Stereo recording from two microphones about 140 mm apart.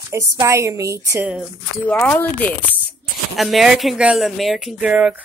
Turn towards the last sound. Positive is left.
turn(degrees=-5)  # may be behind; listen again after turning